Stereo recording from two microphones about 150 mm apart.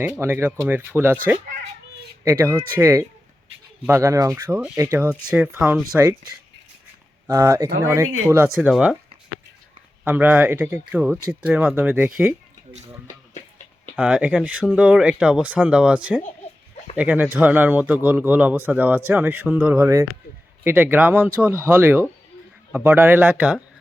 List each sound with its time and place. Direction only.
0.0 s a man's voice: 15° right (ahead or behind)
2.2 s a man's voice: 15° right (ahead or behind)
5.3 s a man's voice: 10° right (ahead or behind)
7.3 s speech: 20° right (ahead or behind)
10.0 s a man's voice: 10° right (ahead or behind)
14.0 s a man's voice: 10° right (ahead or behind)